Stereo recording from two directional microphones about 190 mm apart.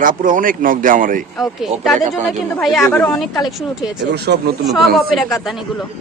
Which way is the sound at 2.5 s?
Centre (ahead or behind).